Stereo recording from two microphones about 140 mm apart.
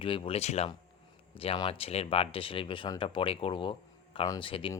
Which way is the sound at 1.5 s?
40° left (ahead or behind).